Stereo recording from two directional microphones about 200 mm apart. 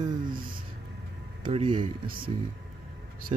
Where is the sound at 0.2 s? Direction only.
45° right (ahead or behind).